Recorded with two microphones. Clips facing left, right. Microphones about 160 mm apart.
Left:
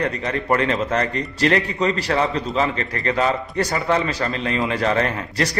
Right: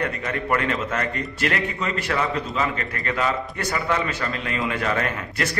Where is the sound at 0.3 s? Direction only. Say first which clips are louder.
Left 4 dB; 35° left (ahead or behind).